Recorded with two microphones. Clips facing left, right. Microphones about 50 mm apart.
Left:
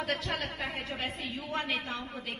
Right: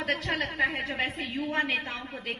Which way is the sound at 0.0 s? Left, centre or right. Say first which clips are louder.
Right 4 dB; right.